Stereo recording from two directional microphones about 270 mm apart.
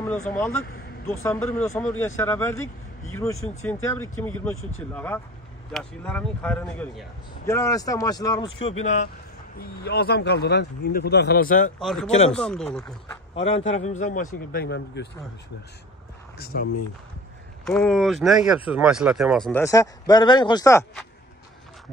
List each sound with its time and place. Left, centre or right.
0.0 s vehicle: centre
1.0 s a man's voice: centre; by 11.7 s left
11.8 s speech: centre
13.3 s speech: left
16.3 s speech: left
17.6 s a man's voice: centre